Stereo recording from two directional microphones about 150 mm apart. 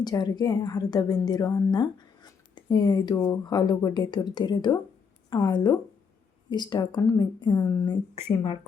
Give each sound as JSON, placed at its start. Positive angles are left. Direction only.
{"t": 0.0, "sound": "speech", "side_deg": 25}
{"t": 7.9, "sound": "speech", "side_deg": 40}